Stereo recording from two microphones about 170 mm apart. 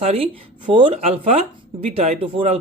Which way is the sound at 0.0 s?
35° right (ahead or behind).